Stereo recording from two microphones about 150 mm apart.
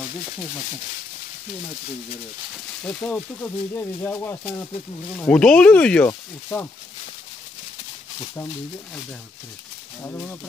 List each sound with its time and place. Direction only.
2.8 s speech: 5° left (ahead or behind)
10.0 s speech: 15° left (ahead or behind)